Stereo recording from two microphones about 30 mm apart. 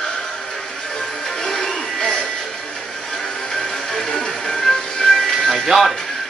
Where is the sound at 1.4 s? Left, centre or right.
Left.